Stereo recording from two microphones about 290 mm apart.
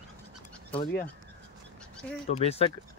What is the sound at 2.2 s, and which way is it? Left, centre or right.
Speech, left.